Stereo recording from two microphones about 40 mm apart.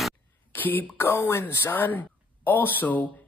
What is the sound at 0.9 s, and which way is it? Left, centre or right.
Speech, left.